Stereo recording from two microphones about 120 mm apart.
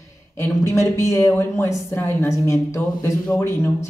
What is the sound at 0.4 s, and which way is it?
Speech, 25° left (ahead or behind).